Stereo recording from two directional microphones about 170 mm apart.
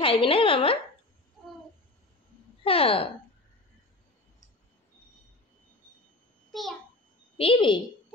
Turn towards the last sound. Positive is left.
turn(degrees=30)  # may be behind; listen again after turning